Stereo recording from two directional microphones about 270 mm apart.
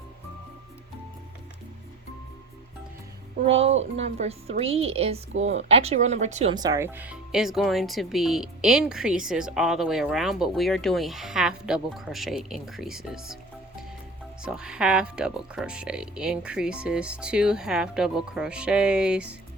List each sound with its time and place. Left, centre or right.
3.4 s a woman's voice: right
3.9 s a woman's voice: right; by 19.4 s centre